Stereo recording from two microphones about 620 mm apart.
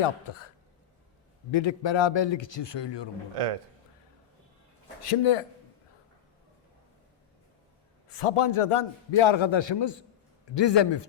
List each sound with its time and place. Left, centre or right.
0.0 s a man's voice: left
3.3 s a man's voice: right
5.2 s a man's voice: left
8.2 s a man's voice: left